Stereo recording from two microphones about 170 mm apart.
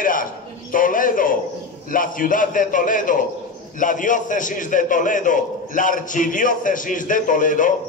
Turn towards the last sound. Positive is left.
turn(degrees=50)  # may be behind; listen again after turning